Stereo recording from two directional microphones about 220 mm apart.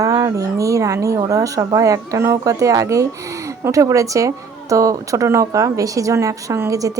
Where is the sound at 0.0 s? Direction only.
15° right (ahead or behind).